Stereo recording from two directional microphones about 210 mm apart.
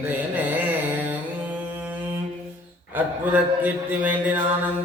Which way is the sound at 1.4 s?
10° right (ahead or behind).